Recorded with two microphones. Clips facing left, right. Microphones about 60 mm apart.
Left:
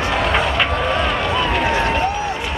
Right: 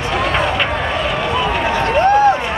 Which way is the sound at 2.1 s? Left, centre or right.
Right.